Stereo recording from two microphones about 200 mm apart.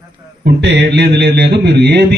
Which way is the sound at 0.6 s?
60° right (ahead or behind).